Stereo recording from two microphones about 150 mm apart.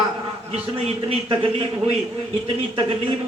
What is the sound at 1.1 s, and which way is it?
Speech, 35° right (ahead or behind).